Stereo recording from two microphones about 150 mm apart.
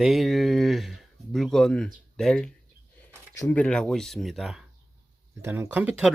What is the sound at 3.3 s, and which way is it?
Speech, 20° left (ahead or behind).